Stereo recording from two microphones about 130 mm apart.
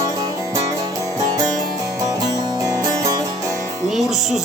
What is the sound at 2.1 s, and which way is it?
Music, 25° right (ahead or behind).